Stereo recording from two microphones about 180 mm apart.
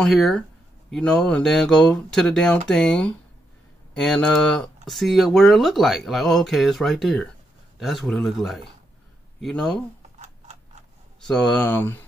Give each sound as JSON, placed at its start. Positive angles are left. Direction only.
{"t": 0.0, "sound": "speech", "side_deg": 0}
{"t": 10.1, "sound": "a sound", "side_deg": -40}
{"t": 11.2, "sound": "speech", "side_deg": 5}